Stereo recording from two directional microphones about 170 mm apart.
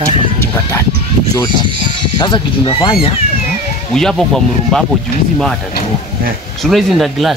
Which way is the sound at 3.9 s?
Centre (ahead or behind).